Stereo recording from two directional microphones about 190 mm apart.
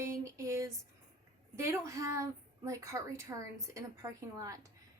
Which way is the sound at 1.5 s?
15° right (ahead or behind).